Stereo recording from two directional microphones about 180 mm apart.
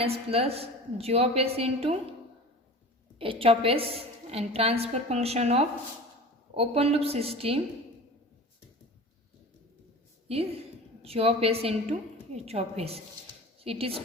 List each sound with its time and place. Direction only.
0.0 s a woman's voice: 35° right (ahead or behind)
3.2 s a woman's voice: 30° right (ahead or behind)
11.0 s a woman's voice: 35° right (ahead or behind)